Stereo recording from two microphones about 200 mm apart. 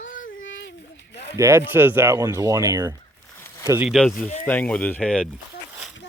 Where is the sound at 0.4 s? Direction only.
65° left (ahead or behind).